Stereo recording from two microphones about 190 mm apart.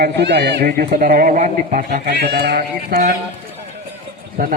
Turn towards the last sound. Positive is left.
turn(degrees=-50)  # may be behind; listen again after turning